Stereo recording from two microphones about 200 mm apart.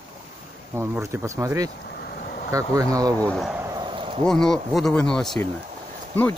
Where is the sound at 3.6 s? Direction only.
25° right (ahead or behind).